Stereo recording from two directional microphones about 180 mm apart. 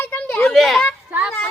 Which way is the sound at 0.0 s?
10° left (ahead or behind).